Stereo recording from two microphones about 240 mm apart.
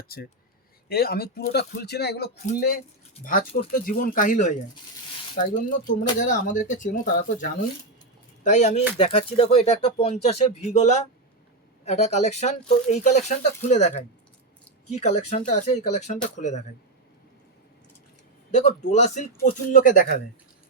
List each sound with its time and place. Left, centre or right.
0.1 s speech: left
3.8 s speech: left
18.5 s speech: left